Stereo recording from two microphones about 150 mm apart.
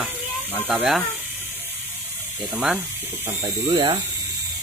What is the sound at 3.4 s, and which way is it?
Speech, 30° right (ahead or behind).